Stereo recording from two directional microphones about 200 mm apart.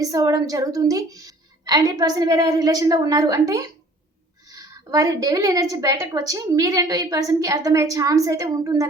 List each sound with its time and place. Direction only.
0.0 s a woman's voice: 15° right (ahead or behind)